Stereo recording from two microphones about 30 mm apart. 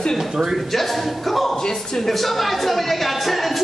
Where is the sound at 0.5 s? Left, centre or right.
Centre.